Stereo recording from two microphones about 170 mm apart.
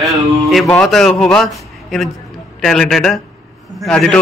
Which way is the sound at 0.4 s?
Centre (ahead or behind).